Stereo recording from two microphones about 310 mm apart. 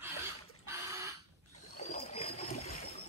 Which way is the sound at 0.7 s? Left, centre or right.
Centre.